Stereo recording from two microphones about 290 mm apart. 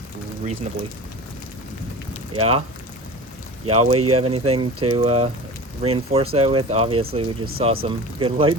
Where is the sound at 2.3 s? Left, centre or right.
Centre.